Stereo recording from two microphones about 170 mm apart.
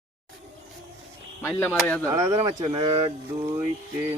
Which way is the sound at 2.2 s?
25° right (ahead or behind).